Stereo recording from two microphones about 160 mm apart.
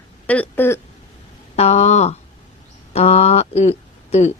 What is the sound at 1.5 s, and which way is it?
Speech, 45° left (ahead or behind).